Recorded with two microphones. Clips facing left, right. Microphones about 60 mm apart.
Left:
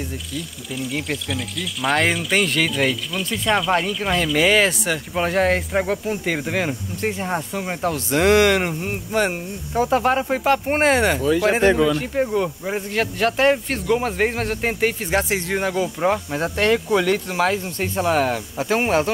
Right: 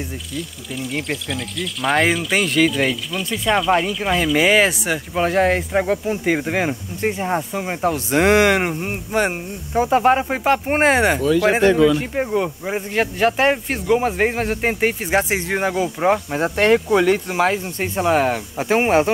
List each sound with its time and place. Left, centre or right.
0.4 s speech: centre
5.1 s speech: centre
8.1 s speech: right
11.6 s speech: centre
12.0 s speech: centre